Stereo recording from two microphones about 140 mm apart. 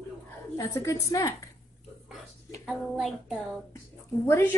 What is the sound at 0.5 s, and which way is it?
Speech, 20° left (ahead or behind).